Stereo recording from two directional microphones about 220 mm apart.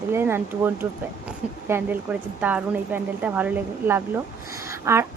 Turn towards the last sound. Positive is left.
turn(degrees=-15)  # may be behind; listen again after turning